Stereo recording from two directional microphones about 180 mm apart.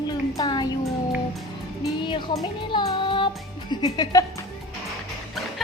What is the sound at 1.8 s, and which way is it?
A woman's voice, 25° left (ahead or behind).